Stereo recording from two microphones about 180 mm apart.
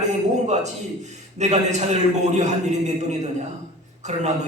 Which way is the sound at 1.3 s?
40° right (ahead or behind).